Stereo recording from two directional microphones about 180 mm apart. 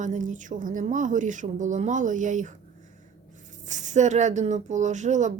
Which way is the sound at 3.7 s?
40° right (ahead or behind).